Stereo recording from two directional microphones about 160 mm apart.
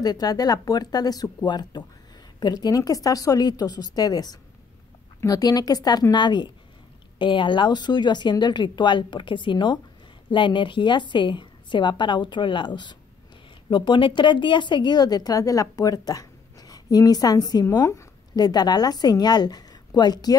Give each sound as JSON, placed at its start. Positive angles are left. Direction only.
{"t": 0.0, "sound": "a woman's voice", "side_deg": 25}